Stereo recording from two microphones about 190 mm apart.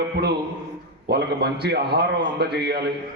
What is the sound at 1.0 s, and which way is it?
A man's voice, 60° right (ahead or behind).